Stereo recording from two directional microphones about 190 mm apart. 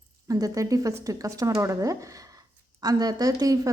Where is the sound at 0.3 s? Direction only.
20° right (ahead or behind).